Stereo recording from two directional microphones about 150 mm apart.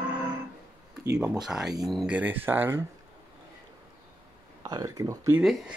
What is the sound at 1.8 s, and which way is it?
Speech, 5° right (ahead or behind).